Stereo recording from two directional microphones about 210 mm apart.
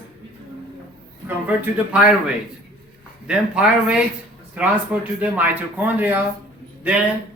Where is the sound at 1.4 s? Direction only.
5° right (ahead or behind).